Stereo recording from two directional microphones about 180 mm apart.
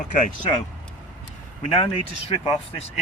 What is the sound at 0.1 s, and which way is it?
Speech, 50° left (ahead or behind).